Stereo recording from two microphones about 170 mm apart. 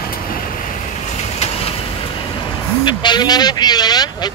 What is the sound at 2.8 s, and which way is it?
Speech, 25° left (ahead or behind).